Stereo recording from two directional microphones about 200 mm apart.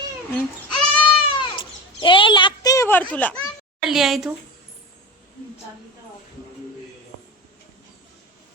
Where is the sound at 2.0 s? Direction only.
25° left (ahead or behind); by 3.4 s 5° left (ahead or behind).